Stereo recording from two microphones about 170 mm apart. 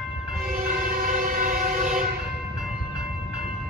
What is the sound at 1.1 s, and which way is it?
Train, 55° right (ahead or behind).